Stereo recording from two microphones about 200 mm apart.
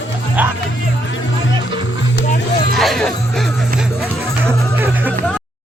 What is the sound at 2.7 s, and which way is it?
Speech, centre (ahead or behind).